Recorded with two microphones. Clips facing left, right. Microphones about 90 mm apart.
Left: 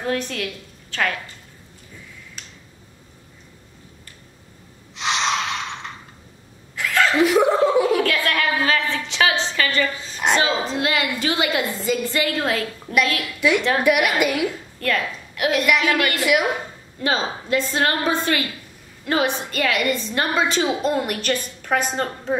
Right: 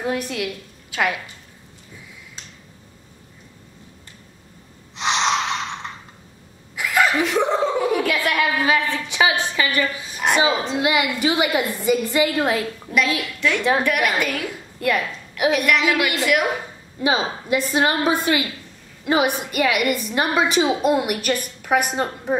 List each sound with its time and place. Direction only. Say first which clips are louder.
0.0 s a woman's voice: right 1 dB; 10° right (ahead or behind)
2.4 s finger snapping: even; 20° right (ahead or behind)
4.9 s snort: right 2 dB; 25° right (ahead or behind)
6.7 s a sound: even; 10° right (ahead or behind)
7.2 s a sound: left 3 dB; 5° left (ahead or behind)
7.8 s a sound: left 1 dB; 10° right (ahead or behind)
8.9 s a woman's voice: right 1 dB; 15° right (ahead or behind)
13.4 s a woman's voice: left 1 dB; 10° left (ahead or behind)
14.8 s a woman's voice: right 2 dB; 10° right (ahead or behind)
16.2 s a woman's voice: even; centre (ahead or behind)
17.0 s a woman's voice: right 2 dB; 15° right (ahead or behind)